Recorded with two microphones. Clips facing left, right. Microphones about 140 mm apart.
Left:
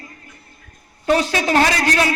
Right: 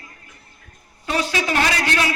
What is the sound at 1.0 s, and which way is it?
A man's voice, 45° left (ahead or behind).